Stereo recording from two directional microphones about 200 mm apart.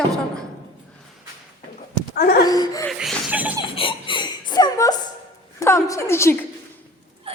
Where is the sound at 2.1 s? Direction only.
50° left (ahead or behind).